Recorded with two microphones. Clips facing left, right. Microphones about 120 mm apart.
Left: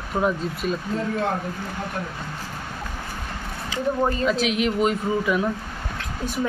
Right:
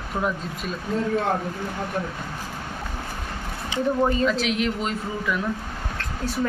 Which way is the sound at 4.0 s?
5° left (ahead or behind).